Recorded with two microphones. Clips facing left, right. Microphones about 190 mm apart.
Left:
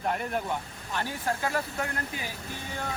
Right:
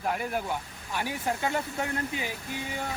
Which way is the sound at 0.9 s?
20° right (ahead or behind).